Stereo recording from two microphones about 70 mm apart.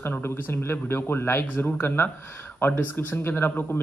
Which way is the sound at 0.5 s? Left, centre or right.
Left.